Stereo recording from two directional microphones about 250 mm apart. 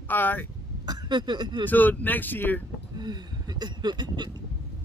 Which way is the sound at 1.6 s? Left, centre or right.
Centre.